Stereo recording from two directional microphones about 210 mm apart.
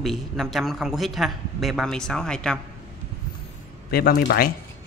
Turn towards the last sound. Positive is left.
turn(degrees=45)  # may be behind; listen again after turning